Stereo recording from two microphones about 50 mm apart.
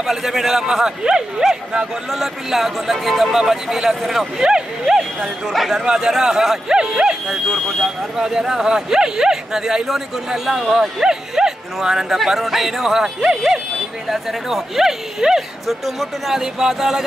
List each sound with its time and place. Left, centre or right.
0.0 s speech: centre
2.0 s speech: centre
5.5 s speech: centre
5.8 s speech: centre
7.2 s speech: centre
8.2 s speech: centre